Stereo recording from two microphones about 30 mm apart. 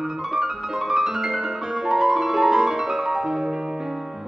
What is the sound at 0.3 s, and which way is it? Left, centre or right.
Music, centre.